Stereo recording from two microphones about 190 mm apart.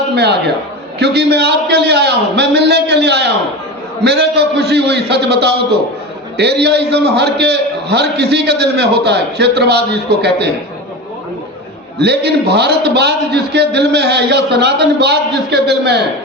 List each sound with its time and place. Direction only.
0.1 s a man's voice: 60° right (ahead or behind)
11.9 s a man's voice: 60° right (ahead or behind)